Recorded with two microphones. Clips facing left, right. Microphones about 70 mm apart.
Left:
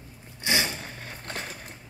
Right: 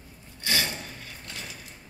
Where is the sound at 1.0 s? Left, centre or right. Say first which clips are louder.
Left 5 dB; left.